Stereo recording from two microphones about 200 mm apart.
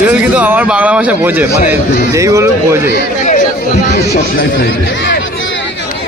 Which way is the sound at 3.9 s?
55° left (ahead or behind).